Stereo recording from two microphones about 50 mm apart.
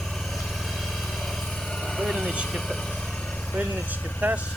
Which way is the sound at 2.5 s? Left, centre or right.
Centre.